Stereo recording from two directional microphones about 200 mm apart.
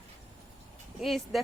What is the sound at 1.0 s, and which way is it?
Speech, centre (ahead or behind).